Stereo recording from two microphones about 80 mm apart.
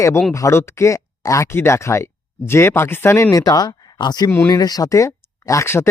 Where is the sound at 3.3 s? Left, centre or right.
Left.